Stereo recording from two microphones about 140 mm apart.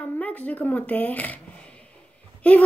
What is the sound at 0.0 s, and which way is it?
Shuffling cards, 10° left (ahead or behind).